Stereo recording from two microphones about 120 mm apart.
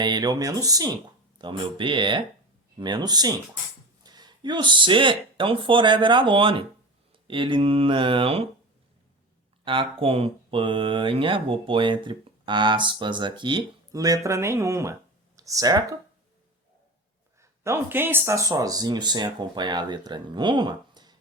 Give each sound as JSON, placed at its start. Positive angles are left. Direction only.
{"t": 0.0, "sound": "speech", "side_deg": -35}
{"t": 1.4, "sound": "speech", "side_deg": -40}
{"t": 9.7, "sound": "speech", "side_deg": -45}
{"t": 13.9, "sound": "speech", "side_deg": -30}
{"t": 17.4, "sound": "speech", "side_deg": -25}